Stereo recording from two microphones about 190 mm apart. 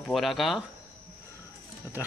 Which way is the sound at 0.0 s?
Centre (ahead or behind).